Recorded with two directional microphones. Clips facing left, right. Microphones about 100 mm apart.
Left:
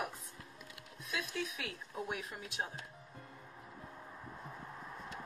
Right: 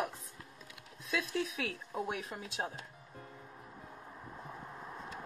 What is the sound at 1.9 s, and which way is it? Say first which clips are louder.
Speech: right 2 dB; 30° right (ahead or behind).